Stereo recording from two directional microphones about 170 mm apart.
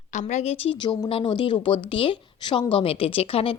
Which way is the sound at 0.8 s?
30° left (ahead or behind).